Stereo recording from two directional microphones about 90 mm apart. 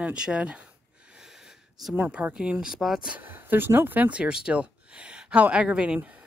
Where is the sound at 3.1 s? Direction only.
20° right (ahead or behind).